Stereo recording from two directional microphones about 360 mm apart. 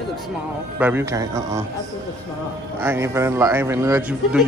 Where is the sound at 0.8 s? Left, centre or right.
Centre.